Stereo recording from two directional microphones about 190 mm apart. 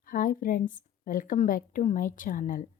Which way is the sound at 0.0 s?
50° left (ahead or behind).